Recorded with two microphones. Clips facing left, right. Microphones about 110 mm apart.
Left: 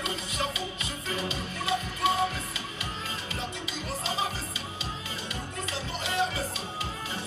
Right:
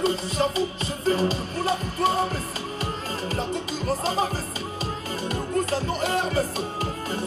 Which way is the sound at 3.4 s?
40° right (ahead or behind).